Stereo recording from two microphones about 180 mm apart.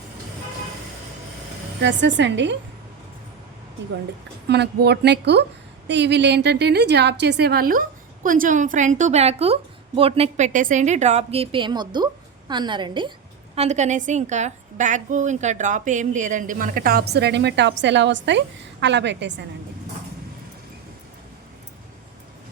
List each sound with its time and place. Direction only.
1.8 s a woman's voice: 80° right
4.4 s a woman's voice: 70° right (ahead or behind); by 13.1 s 25° right (ahead or behind)
13.6 s a woman's voice: 40° right (ahead or behind); by 19.4 s 75° right (ahead or behind)